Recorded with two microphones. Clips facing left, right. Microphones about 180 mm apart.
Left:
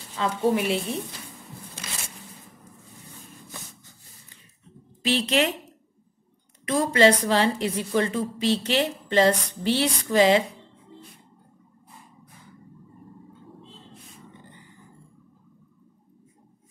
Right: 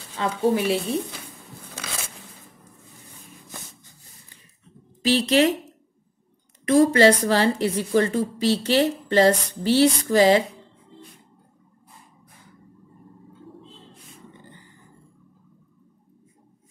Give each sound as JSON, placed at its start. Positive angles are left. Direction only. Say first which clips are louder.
{"t": 0.2, "sound": "a woman's voice", "louder": "right 1 dB", "side_deg": -30}
{"t": 5.0, "sound": "a woman's voice", "louder": "right 4 dB", "side_deg": -35}
{"t": 6.7, "sound": "a woman's voice", "louder": "right 4 dB", "side_deg": -40}
{"t": 13.9, "sound": "a sound", "louder": "even", "side_deg": 0}